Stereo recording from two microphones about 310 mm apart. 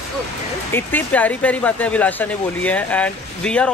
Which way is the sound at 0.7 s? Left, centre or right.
Centre.